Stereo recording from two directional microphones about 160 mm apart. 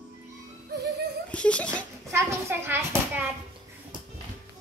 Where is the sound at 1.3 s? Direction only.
5° left (ahead or behind).